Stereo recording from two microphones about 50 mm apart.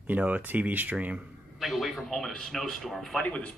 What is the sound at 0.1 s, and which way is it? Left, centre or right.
Speech, right.